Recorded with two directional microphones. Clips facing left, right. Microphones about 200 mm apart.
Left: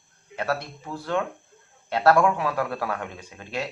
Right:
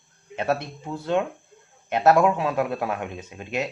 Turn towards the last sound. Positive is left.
turn(degrees=-20)  # may be behind; listen again after turning